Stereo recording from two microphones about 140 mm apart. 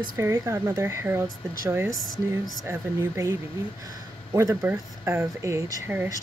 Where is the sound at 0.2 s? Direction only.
20° right (ahead or behind).